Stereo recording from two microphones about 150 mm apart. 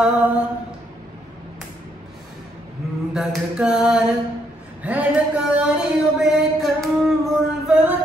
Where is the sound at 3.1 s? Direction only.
5° right (ahead or behind).